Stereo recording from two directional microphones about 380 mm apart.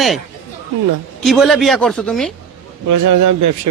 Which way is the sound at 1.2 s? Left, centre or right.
Centre.